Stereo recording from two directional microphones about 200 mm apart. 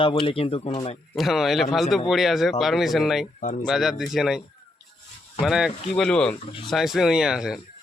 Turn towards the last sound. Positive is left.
turn(degrees=-5)  # may be behind; listen again after turning